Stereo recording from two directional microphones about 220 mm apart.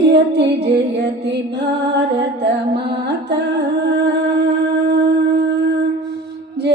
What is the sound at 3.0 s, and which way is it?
Music, 50° right (ahead or behind).